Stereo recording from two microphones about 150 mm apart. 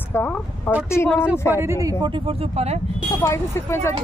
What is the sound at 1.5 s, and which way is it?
Speech, 15° right (ahead or behind).